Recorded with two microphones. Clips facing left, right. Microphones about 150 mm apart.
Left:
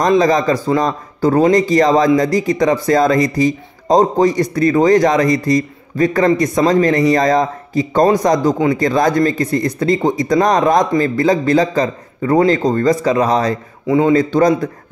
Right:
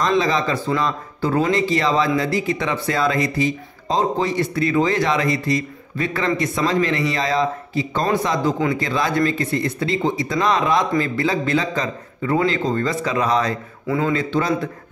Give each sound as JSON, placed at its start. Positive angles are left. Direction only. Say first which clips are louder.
{"t": 0.2, "sound": "a man's voice", "louder": "left 7 dB", "side_deg": 40}
{"t": 13.8, "sound": "a man's voice", "louder": "left 8 dB", "side_deg": 25}
{"t": 14.1, "sound": "a man's voice", "louder": "left 8 dB", "side_deg": 40}